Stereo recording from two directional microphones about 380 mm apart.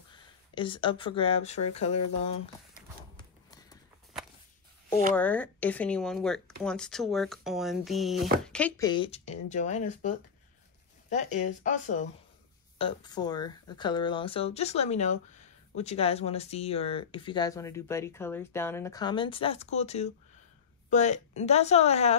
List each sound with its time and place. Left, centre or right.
0.1 s speech: centre
5.1 s speech: centre